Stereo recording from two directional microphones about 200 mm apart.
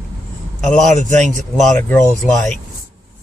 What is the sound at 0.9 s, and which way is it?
Speech, 35° right (ahead or behind).